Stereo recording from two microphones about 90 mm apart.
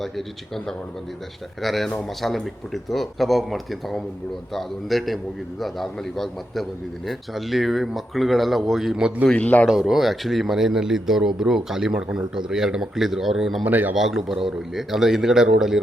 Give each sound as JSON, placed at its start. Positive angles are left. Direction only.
{"t": 0.0, "sound": "a man's voice", "side_deg": 0}
{"t": 1.6, "sound": "a man's voice", "side_deg": 0}
{"t": 9.2, "sound": "a man's voice", "side_deg": 15}
{"t": 9.6, "sound": "a man's voice", "side_deg": -5}
{"t": 13.7, "sound": "speech", "side_deg": -20}
{"t": 13.9, "sound": "a man's voice", "side_deg": -5}